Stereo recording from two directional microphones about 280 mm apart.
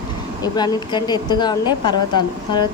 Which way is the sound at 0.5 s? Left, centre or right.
Centre.